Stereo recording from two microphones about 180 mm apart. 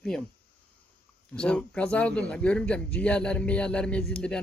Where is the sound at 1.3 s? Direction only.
5° left (ahead or behind).